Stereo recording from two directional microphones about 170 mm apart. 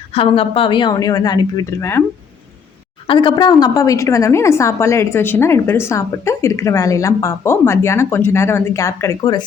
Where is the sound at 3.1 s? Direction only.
30° left (ahead or behind).